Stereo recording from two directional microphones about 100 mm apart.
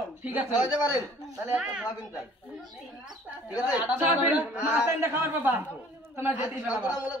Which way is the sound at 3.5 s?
40° left (ahead or behind).